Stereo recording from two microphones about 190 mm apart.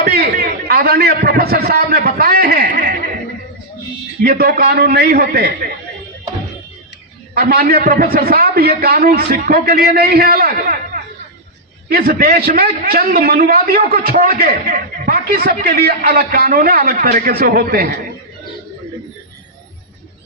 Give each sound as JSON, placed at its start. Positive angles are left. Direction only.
{"t": 0.0, "sound": "a man's voice", "side_deg": -50}
{"t": 4.2, "sound": "a man's voice", "side_deg": -55}
{"t": 7.3, "sound": "a man's voice", "side_deg": -50}